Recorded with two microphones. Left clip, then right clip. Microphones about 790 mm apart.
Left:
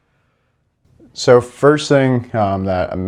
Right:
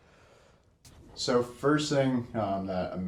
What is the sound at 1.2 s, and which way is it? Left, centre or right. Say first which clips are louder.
Speech: left 17 dB; left.